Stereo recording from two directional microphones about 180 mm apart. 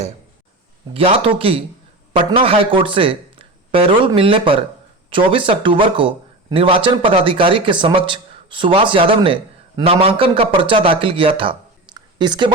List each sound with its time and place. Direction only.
0.9 s a man's voice: 30° right (ahead or behind)